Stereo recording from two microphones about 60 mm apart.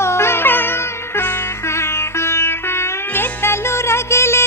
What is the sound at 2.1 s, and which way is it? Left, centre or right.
Music, left.